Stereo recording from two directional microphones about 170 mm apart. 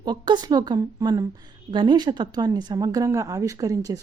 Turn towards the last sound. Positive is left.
turn(degrees=-20)  # may be behind; listen again after turning